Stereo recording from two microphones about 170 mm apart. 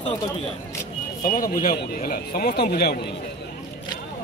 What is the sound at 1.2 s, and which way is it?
Speech, 55° left (ahead or behind).